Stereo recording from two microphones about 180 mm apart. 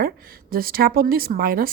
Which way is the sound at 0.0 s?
55° right (ahead or behind).